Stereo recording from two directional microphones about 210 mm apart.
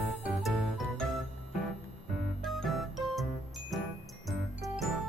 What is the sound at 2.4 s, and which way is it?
Music, centre (ahead or behind).